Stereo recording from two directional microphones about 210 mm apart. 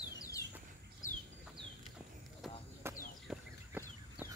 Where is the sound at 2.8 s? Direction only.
10° right (ahead or behind).